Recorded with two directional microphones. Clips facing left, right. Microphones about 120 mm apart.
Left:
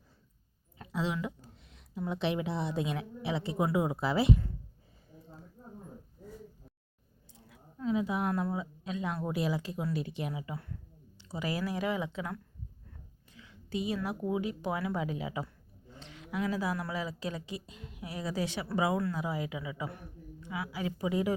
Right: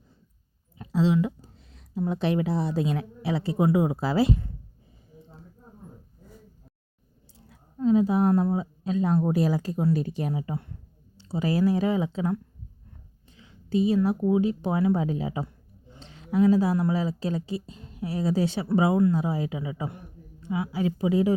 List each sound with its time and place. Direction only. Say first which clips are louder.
0.9 s a woman's voice: right 11 dB; 30° right (ahead or behind)
2.0 s a woman's voice: right 7 dB; 40° right (ahead or behind)
7.3 s a sound: right 10 dB; 30° right (ahead or behind)
9.1 s a woman's voice: right 8 dB; 40° right (ahead or behind)